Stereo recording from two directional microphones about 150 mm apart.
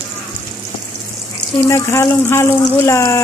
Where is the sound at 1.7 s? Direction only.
20° left (ahead or behind).